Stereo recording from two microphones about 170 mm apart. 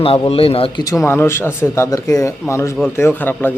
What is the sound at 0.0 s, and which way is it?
Speech, 35° left (ahead or behind).